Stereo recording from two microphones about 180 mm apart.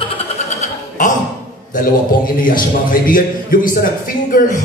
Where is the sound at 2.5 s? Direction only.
50° left (ahead or behind).